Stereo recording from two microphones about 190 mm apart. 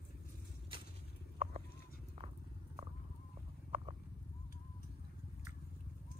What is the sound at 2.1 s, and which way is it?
Walk, 35° right (ahead or behind).